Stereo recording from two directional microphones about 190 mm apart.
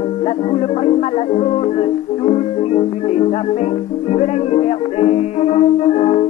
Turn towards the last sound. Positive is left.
turn(degrees=35)  # may be behind; listen again after turning